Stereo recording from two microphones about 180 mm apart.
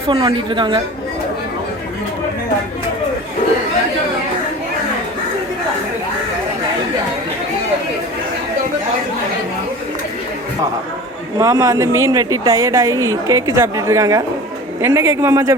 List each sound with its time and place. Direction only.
0.1 s a woman's voice: 25° right (ahead or behind)
11.3 s speech: 20° right (ahead or behind)